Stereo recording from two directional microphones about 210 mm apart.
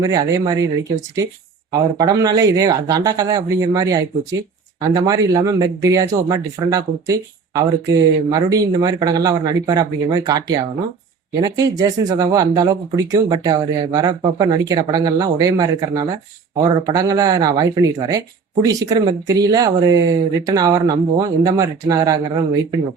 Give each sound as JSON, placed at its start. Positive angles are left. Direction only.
{"t": 0.0, "sound": "speech", "side_deg": -15}
{"t": 1.7, "sound": "speech", "side_deg": -20}